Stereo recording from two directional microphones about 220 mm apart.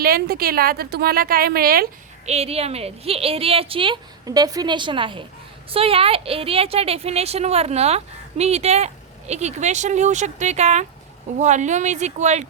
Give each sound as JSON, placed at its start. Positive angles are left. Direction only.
{"t": 0.0, "sound": "a woman's voice", "side_deg": -45}
{"t": 2.2, "sound": "a woman's voice", "side_deg": -30}